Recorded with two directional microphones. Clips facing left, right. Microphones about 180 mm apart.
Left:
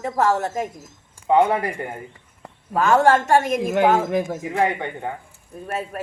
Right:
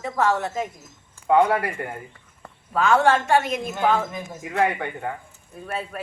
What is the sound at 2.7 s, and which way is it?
A man's voice, 45° left (ahead or behind).